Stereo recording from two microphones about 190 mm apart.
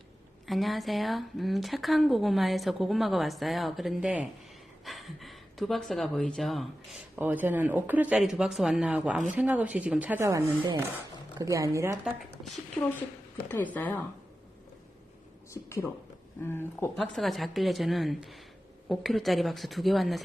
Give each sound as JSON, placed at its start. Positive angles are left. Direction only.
{"t": 0.4, "sound": "speech", "side_deg": 0}
{"t": 7.2, "sound": "speech", "side_deg": -10}
{"t": 13.7, "sound": "speech", "side_deg": 10}
{"t": 15.5, "sound": "speech", "side_deg": 15}
{"t": 17.0, "sound": "speech", "side_deg": 0}